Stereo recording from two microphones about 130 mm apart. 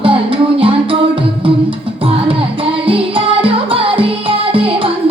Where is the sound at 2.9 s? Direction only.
45° right (ahead or behind).